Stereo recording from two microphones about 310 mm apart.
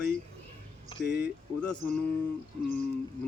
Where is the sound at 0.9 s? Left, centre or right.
Centre.